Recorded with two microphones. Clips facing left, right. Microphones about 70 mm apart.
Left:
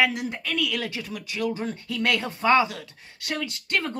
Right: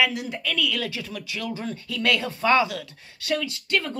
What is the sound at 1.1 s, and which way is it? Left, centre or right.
Speech, centre.